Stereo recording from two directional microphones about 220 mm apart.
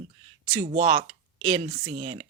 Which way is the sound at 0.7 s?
35° right (ahead or behind).